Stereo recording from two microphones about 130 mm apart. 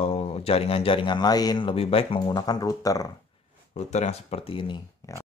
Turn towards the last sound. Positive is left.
turn(degrees=25)  # may be behind; listen again after turning